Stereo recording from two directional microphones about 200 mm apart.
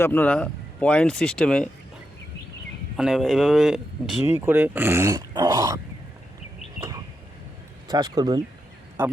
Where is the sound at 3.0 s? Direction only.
Centre (ahead or behind); by 5.8 s 15° right (ahead or behind).